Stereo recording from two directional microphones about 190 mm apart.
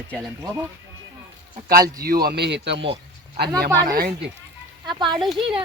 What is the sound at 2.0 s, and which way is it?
Speech, 55° right (ahead or behind).